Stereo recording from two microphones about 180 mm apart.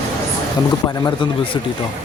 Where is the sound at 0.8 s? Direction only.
20° left (ahead or behind).